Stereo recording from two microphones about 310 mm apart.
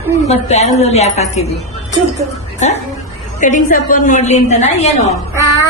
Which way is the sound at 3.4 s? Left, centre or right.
Left.